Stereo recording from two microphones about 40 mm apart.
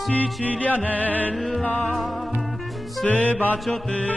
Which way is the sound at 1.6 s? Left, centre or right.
Left.